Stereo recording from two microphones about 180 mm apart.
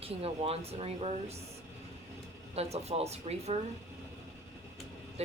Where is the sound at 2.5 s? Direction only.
35° right (ahead or behind).